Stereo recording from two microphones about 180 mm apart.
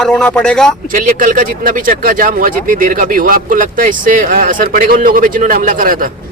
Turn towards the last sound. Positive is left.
turn(degrees=-50)  # may be behind; listen again after turning